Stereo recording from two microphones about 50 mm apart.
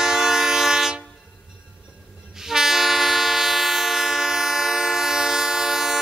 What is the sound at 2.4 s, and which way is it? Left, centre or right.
Train, centre.